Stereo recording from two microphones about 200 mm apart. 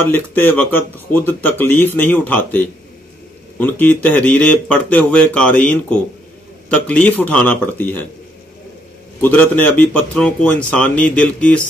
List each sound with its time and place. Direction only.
0.1 s speech: 10° left (ahead or behind)
9.2 s speech: 10° left (ahead or behind)